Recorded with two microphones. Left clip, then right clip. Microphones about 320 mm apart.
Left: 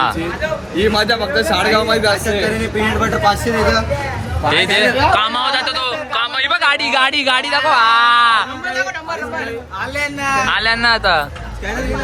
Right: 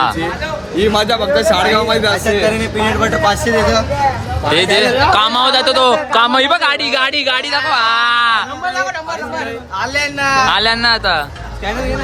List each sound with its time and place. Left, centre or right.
0.8 s speech: centre
4.5 s speech: centre
6.7 s speech: centre
9.9 s speech: right